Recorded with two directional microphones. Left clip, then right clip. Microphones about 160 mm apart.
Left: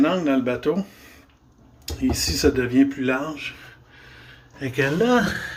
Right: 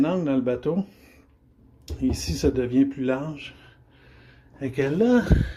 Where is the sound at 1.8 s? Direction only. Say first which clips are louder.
Left 4 dB; 25° right (ahead or behind).